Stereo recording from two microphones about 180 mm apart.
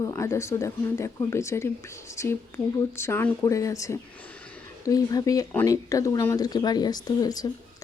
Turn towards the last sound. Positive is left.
turn(degrees=20)  # may be behind; listen again after turning